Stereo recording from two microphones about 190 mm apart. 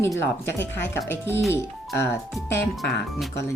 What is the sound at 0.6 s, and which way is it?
Speech, 70° left (ahead or behind).